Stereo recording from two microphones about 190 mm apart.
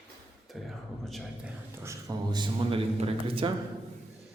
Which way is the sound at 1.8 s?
20° right (ahead or behind).